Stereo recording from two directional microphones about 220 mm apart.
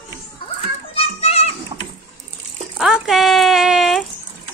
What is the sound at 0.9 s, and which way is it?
Children playing, 25° left (ahead or behind).